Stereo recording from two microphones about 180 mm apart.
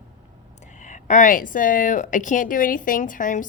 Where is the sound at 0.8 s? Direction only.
45° left (ahead or behind).